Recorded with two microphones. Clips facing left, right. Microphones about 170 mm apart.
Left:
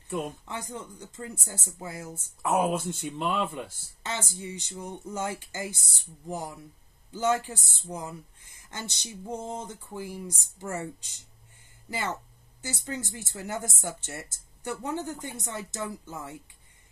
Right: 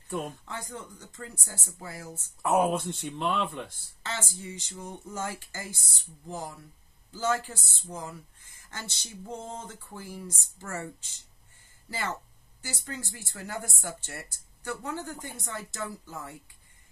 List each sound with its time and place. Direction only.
0.2 s speech: 20° left (ahead or behind)
2.4 s speech: centre (ahead or behind)
4.0 s speech: 20° left (ahead or behind)